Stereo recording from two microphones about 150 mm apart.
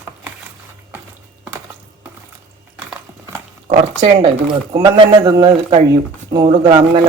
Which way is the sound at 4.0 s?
35° right (ahead or behind).